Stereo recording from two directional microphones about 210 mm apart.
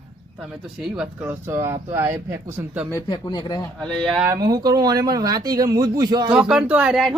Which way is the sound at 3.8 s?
5° left (ahead or behind).